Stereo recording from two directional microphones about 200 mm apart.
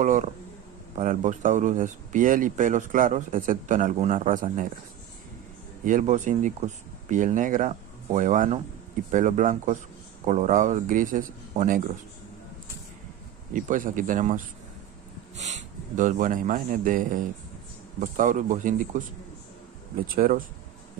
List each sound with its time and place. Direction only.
0.0 s speech: 40° right (ahead or behind)
5.9 s speech: 40° right (ahead or behind)
13.5 s a man's voice: 40° right (ahead or behind)
20.2 s speech: 45° right (ahead or behind)